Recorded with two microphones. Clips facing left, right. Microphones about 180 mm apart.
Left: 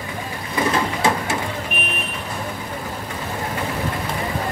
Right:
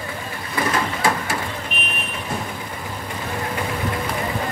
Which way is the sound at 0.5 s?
20° left (ahead or behind).